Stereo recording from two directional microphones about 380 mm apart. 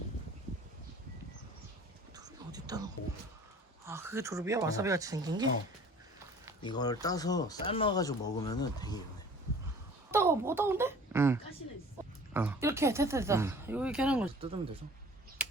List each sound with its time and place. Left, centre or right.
2.1 s whispering: centre
3.8 s speech: centre
6.6 s speech: centre
10.1 s a sound: centre
12.3 s speech: centre